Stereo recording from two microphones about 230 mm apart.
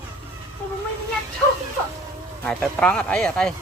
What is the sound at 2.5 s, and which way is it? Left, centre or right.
Speech, centre.